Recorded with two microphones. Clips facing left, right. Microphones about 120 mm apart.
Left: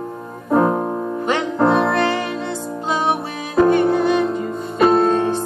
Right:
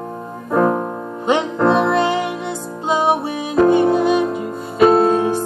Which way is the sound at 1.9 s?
15° right (ahead or behind).